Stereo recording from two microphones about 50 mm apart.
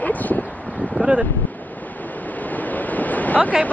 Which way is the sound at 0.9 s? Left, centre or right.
Right.